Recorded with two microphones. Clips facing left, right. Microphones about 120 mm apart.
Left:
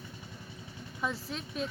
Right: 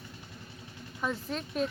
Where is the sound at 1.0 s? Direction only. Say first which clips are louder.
Right 2 dB; 5° left (ahead or behind).